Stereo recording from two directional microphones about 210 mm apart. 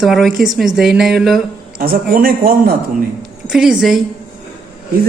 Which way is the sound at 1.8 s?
45° right (ahead or behind).